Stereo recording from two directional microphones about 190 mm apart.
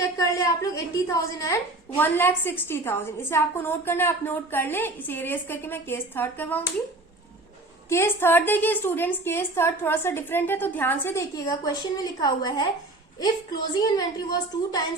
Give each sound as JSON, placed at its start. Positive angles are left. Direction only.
{"t": 0.2, "sound": "a woman's voice", "side_deg": 15}
{"t": 7.9, "sound": "a woman's voice", "side_deg": 15}